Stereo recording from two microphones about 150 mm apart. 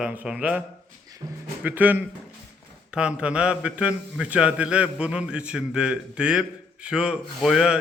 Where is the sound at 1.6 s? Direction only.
10° right (ahead or behind).